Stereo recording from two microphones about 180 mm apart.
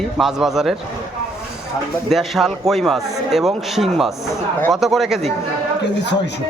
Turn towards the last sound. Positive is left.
turn(degrees=75)  # may be behind; listen again after turning